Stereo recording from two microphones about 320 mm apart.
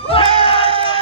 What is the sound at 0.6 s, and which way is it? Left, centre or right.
Music, centre.